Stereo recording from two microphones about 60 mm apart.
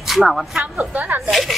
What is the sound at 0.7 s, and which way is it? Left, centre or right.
Speech, right.